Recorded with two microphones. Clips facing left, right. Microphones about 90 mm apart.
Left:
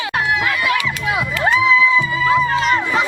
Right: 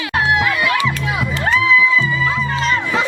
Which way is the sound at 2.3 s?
5° left (ahead or behind).